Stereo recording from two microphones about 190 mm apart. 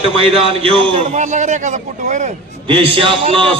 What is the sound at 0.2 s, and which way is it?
A man's voice, 30° right (ahead or behind).